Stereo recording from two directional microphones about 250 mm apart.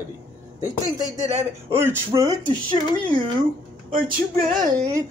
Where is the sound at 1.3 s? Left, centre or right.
Centre.